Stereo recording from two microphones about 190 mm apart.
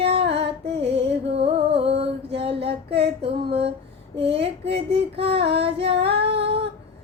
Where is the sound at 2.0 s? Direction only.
30° right (ahead or behind).